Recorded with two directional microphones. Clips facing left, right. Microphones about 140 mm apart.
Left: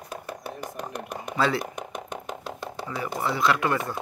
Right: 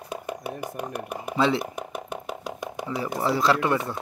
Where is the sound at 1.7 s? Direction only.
5° right (ahead or behind).